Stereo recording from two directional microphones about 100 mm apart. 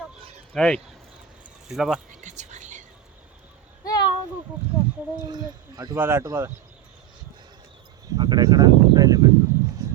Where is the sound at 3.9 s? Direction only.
45° left (ahead or behind).